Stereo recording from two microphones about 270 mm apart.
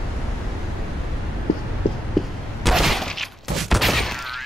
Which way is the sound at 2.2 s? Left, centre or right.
Centre.